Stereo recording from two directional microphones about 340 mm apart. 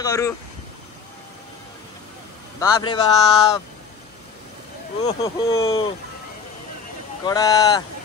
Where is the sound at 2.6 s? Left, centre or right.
Centre.